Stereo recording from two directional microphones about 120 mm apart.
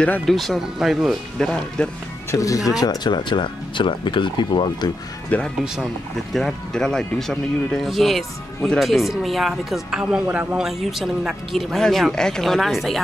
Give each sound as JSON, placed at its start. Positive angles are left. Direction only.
{"t": 0.0, "sound": "speech", "side_deg": 5}
{"t": 2.3, "sound": "speech", "side_deg": 30}
{"t": 5.3, "sound": "speech", "side_deg": 15}